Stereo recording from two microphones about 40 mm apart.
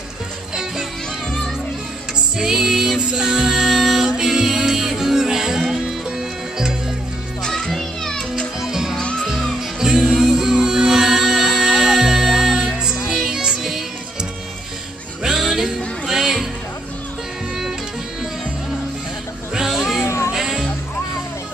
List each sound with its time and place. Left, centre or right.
2.3 s music: centre
7.4 s music: centre
8.5 s music: centre
9.2 s music: centre
10.3 s music: centre
15.2 s music: centre
19.5 s cat: centre
20.3 s music: centre